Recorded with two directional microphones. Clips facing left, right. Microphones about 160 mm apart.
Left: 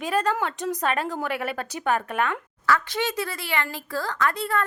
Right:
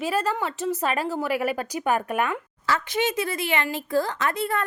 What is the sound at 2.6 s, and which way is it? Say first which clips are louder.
Speech: even; 20° right (ahead or behind).